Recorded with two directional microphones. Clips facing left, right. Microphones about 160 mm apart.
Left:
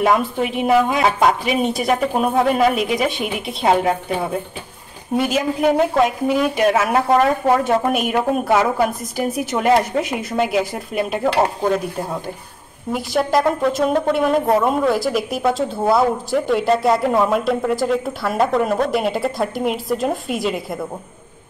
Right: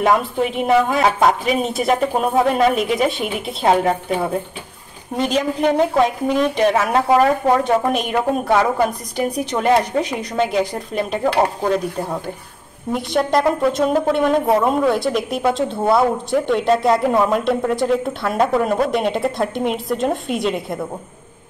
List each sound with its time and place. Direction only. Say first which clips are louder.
0.0 s a woman's voice: even; 5° left (ahead or behind)
12.9 s a woman's voice: even; 5° left (ahead or behind)